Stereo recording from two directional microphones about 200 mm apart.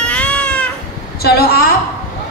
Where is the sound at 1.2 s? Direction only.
50° left (ahead or behind).